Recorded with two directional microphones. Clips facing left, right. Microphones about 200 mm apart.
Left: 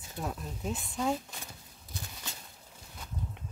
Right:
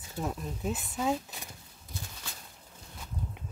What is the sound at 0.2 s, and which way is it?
Speech, 5° right (ahead or behind).